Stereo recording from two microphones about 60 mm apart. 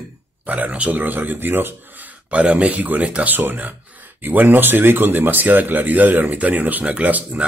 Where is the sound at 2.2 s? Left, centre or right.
Right.